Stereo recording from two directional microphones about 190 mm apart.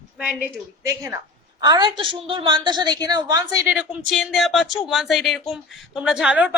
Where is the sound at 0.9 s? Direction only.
15° right (ahead or behind).